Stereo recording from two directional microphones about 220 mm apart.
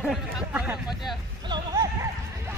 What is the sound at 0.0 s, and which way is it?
Speech, centre (ahead or behind).